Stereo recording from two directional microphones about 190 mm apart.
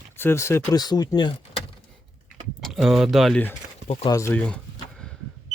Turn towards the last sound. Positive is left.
turn(degrees=15)  # may be behind; listen again after turning